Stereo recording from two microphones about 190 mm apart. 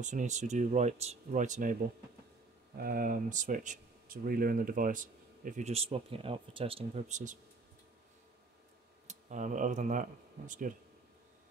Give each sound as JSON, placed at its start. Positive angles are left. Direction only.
{"t": 0.0, "sound": "speech", "side_deg": -40}
{"t": 9.0, "sound": "speech", "side_deg": -40}